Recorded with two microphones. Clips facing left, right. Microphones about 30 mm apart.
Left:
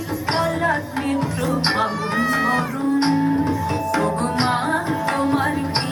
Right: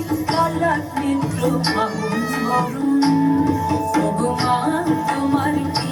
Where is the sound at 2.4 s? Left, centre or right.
Left.